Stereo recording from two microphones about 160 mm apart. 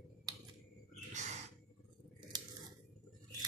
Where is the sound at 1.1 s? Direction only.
50° right (ahead or behind).